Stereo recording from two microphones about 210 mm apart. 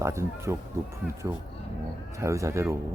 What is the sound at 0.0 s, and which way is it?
Speech, 15° right (ahead or behind).